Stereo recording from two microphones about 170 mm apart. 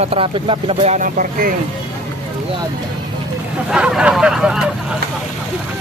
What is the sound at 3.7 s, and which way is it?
Speech, 5° right (ahead or behind).